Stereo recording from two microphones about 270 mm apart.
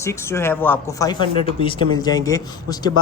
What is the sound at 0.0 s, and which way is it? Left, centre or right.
Speech, centre.